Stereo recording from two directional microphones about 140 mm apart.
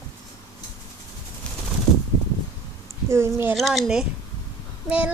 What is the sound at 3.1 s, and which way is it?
Child singing, 15° right (ahead or behind).